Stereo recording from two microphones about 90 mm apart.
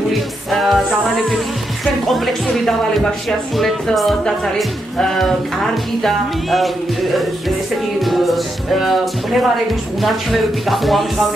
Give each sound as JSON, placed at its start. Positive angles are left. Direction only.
{"t": 0.5, "sound": "speech", "side_deg": 0}
{"t": 8.0, "sound": "speech", "side_deg": 0}
{"t": 10.0, "sound": "speech", "side_deg": 0}